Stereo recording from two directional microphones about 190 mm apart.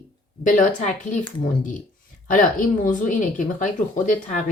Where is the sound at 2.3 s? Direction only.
45° left (ahead or behind).